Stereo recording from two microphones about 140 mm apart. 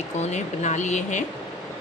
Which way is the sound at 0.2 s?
55° left (ahead or behind).